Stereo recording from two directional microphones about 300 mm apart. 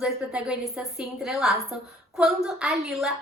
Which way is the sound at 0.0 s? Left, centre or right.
Centre.